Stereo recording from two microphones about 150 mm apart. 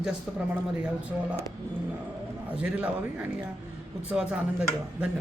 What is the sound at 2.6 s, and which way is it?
A man's voice, 10° right (ahead or behind).